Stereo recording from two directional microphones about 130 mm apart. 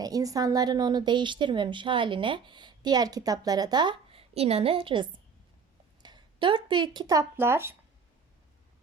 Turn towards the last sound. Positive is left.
turn(degrees=-20)  # may be behind; listen again after turning